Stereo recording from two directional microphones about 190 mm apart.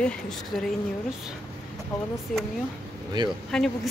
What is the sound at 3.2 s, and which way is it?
Speech, 25° right (ahead or behind).